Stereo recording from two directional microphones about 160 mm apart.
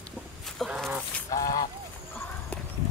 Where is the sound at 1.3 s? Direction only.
20° left (ahead or behind).